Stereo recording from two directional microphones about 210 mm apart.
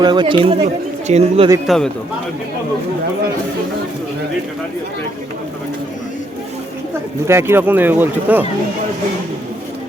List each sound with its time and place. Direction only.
0.0 s speech: 20° right (ahead or behind)
1.6 s a man's voice: centre (ahead or behind)
7.3 s speech: 10° right (ahead or behind)